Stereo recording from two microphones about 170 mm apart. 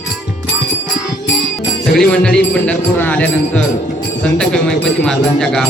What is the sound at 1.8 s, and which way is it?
Speech, 5° left (ahead or behind).